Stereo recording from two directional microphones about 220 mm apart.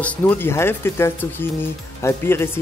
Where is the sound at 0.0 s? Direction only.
5° left (ahead or behind).